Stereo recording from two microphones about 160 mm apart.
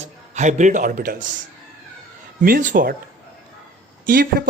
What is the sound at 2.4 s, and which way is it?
Speech, 55° right (ahead or behind).